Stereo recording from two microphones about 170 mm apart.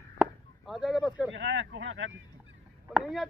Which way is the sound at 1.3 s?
90° right.